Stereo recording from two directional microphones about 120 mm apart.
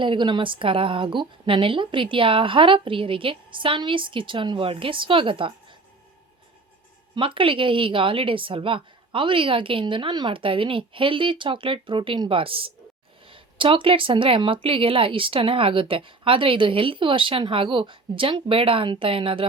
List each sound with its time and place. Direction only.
0.0 s speech: 40° right (ahead or behind)
7.2 s speech: 45° right (ahead or behind)